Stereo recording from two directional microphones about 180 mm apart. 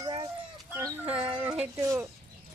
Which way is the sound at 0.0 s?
20° right (ahead or behind).